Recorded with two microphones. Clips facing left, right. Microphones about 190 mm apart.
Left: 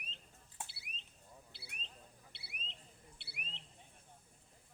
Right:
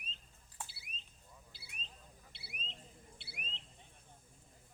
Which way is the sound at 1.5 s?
60° left (ahead or behind).